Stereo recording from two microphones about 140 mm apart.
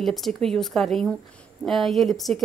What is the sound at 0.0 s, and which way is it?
Speech, centre (ahead or behind).